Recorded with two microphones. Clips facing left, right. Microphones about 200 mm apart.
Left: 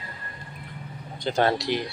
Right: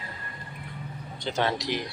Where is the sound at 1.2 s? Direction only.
45° left (ahead or behind).